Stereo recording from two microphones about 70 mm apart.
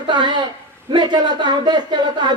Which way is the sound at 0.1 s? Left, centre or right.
Right.